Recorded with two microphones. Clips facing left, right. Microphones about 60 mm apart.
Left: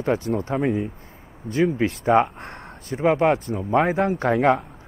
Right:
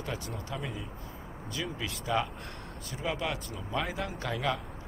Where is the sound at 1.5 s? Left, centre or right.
Left.